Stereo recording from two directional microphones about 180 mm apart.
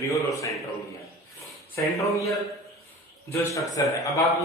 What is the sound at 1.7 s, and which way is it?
Speech, 15° left (ahead or behind).